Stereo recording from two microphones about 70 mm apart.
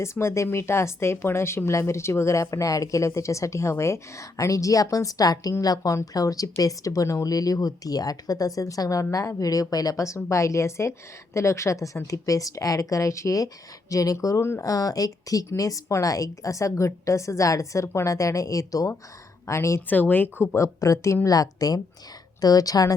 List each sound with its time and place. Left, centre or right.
0.0 s speech: left
6.0 s speech: left
19.9 s speech: left
20.6 s speech: left
21.2 s speech: left